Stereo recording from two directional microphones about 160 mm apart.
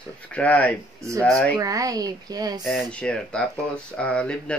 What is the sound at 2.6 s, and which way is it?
Speech, 5° left (ahead or behind).